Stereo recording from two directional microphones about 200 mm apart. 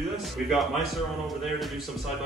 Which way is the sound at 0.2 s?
Centre (ahead or behind).